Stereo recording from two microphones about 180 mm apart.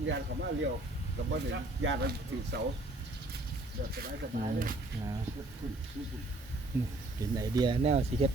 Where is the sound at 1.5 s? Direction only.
90° right.